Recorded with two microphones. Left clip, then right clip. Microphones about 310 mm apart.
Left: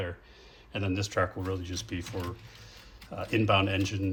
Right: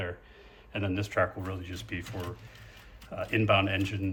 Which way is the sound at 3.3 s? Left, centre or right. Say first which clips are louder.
Even; centre.